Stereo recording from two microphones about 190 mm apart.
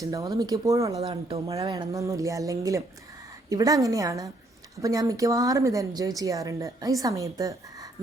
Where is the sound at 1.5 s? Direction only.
20° right (ahead or behind).